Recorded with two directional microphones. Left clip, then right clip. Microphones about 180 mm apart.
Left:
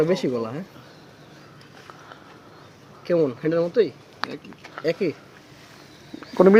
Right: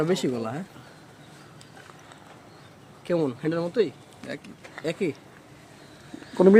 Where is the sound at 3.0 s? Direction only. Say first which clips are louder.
Left 5 dB; centre (ahead or behind).